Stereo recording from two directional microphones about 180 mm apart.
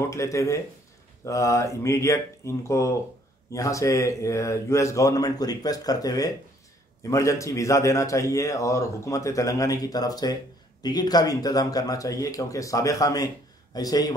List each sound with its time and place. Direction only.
0.1 s a man's voice: 15° left (ahead or behind)